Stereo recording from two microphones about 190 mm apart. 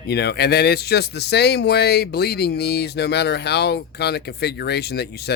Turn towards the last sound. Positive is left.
turn(degrees=60)  # may be behind; listen again after turning